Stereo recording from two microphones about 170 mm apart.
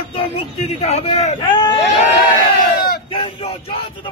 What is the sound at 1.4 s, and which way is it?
Speech, 30° left (ahead or behind).